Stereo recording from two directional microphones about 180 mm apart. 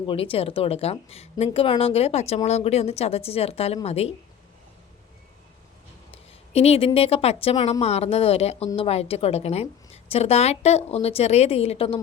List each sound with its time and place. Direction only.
0.1 s speech: 30° left (ahead or behind)
6.5 s speech: 35° left (ahead or behind)